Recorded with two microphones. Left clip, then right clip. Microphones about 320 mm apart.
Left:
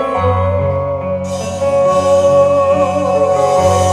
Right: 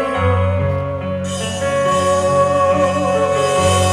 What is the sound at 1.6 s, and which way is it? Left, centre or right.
Music, centre.